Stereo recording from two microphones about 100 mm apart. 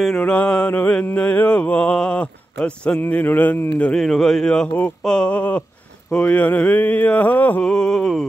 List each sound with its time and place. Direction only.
0.2 s mantra: 15° left (ahead or behind)
3.9 s mantra: 5° left (ahead or behind)
7.6 s a sound: 5° left (ahead or behind)